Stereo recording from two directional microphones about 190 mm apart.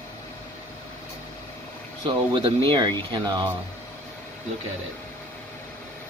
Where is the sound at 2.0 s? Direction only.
25° right (ahead or behind).